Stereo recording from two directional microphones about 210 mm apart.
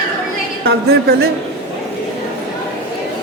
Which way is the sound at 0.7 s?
50° right (ahead or behind).